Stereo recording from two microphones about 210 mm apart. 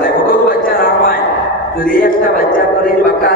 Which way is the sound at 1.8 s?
45° left (ahead or behind).